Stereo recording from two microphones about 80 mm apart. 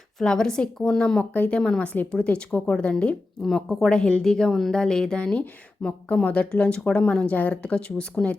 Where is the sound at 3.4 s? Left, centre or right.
Centre.